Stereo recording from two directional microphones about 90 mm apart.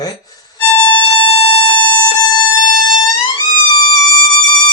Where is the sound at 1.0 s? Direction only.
75° left (ahead or behind).